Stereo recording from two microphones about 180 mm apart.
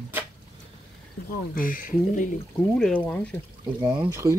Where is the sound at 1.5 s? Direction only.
50° left (ahead or behind).